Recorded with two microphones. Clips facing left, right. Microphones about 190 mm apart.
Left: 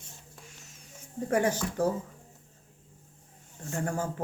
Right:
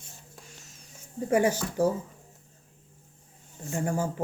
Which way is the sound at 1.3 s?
5° right (ahead or behind).